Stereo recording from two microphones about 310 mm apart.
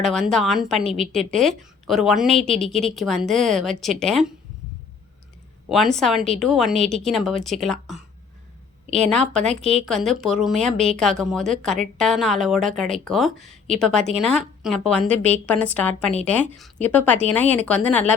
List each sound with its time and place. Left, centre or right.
0.0 s a woman's voice: centre
5.6 s a woman's voice: centre
6.7 s a woman's voice: right
7.0 s a woman's voice: centre
9.0 s a woman's voice: centre